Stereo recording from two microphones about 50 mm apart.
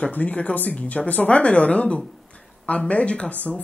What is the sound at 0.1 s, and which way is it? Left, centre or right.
Speech, left.